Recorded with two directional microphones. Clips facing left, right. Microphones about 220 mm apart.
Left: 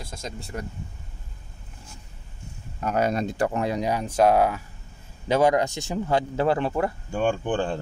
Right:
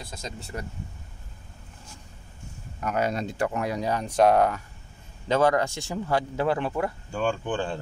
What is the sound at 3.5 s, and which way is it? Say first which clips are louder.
Speech: left 3 dB; 25° left (ahead or behind).